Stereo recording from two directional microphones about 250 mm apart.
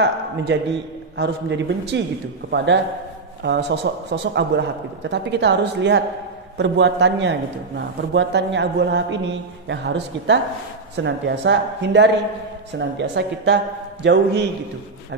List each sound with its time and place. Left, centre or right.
0.0 s a man's voice: right